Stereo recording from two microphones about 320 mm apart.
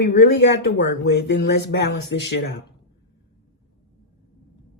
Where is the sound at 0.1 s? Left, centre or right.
Left.